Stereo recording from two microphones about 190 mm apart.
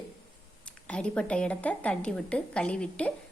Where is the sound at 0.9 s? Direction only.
5° left (ahead or behind).